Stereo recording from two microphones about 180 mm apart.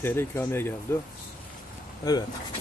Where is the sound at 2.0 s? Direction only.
20° left (ahead or behind).